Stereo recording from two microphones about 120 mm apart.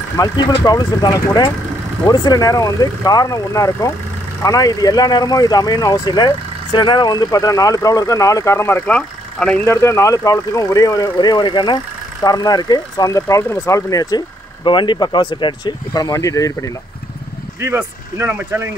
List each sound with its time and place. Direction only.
0.2 s speech: 35° left (ahead or behind); by 9.6 s 10° left (ahead or behind)
9.7 s speech: 25° left (ahead or behind)
18.1 s speech: 15° right (ahead or behind)